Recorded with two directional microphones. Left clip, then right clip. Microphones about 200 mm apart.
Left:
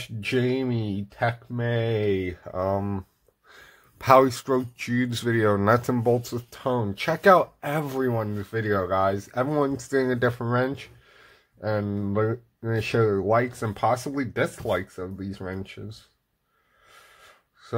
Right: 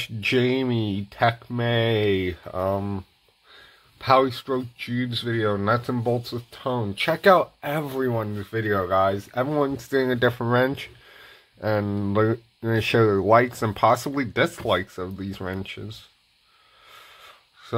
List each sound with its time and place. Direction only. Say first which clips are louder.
0.0 s speech: right 4 dB; 20° right (ahead or behind); by 3.1 s centre (ahead or behind)
3.5 s speech: even; 20° left (ahead or behind)
5.9 s speech: left 2 dB; 10° left (ahead or behind); by 15.8 s 20° right (ahead or behind)